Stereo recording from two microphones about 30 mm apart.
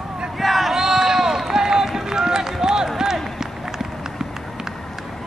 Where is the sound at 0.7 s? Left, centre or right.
Centre.